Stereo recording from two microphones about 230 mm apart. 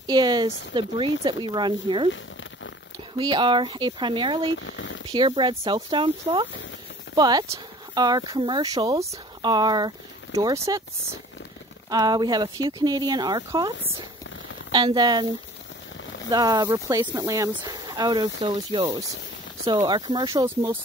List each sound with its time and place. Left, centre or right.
0.0 s speech: centre
3.2 s speech: centre
4.6 s speech: left
5.1 s speech: right
11.9 s speech: centre